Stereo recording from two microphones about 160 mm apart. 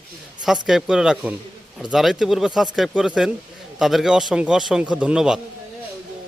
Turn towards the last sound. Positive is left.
turn(degrees=-5)  # may be behind; listen again after turning